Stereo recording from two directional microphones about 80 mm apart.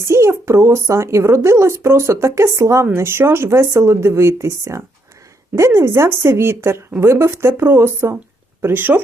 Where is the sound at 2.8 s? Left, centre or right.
Right.